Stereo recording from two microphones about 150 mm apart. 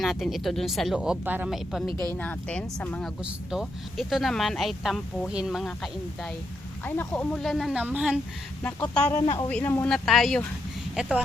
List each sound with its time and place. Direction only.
0.0 s speech: centre (ahead or behind)
1.9 s speech: 25° right (ahead or behind)
2.1 s speech: 10° left (ahead or behind)
6.8 s speech: 15° left (ahead or behind)
7.3 s speech: centre (ahead or behind)
8.6 s speech: 10° left (ahead or behind); by 11.1 s 5° right (ahead or behind)